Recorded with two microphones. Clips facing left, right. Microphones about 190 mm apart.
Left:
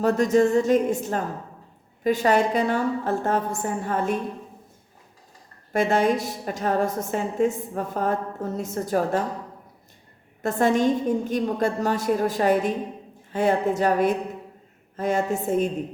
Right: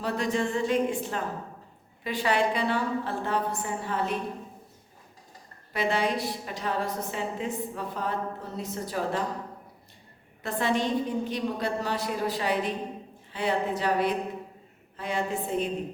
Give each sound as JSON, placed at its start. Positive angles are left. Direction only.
{"t": 0.0, "sound": "a woman's voice", "side_deg": 45}
{"t": 5.7, "sound": "a woman's voice", "side_deg": 45}
{"t": 10.4, "sound": "a woman's voice", "side_deg": 45}